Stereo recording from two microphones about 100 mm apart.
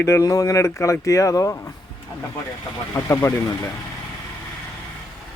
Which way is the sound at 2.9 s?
25° left (ahead or behind).